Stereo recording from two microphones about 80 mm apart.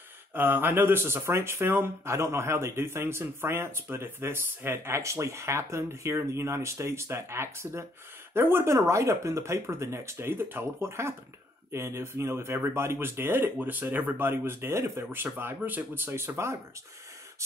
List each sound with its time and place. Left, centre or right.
0.3 s speech: right